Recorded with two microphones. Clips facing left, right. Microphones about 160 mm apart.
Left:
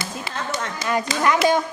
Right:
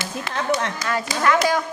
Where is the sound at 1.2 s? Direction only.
20° left (ahead or behind).